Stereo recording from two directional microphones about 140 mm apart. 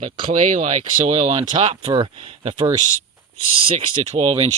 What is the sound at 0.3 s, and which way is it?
Speech, 55° right (ahead or behind).